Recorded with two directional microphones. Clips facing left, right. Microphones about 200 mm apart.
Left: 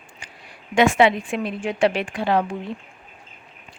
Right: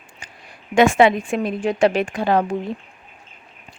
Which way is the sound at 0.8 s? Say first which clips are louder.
Right 3 dB; 45° right (ahead or behind).